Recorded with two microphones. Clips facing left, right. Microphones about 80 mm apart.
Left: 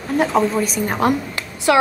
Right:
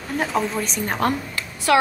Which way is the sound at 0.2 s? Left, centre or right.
Centre.